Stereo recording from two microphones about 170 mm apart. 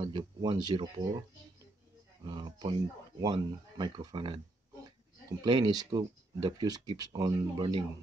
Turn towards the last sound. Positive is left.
turn(degrees=-25)  # may be behind; listen again after turning